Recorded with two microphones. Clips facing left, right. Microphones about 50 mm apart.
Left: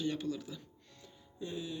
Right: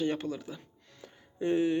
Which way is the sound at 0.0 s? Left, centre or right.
Right.